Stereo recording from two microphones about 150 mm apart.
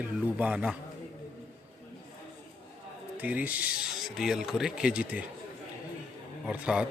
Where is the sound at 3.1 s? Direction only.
10° right (ahead or behind).